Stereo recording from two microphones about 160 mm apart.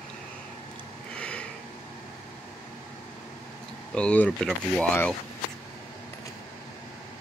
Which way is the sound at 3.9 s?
10° left (ahead or behind).